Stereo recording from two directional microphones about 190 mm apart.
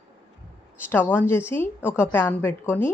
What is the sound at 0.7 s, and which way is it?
A woman's voice, 10° left (ahead or behind).